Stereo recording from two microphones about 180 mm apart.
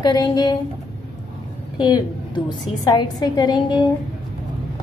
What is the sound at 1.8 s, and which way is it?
A woman's voice, 25° left (ahead or behind).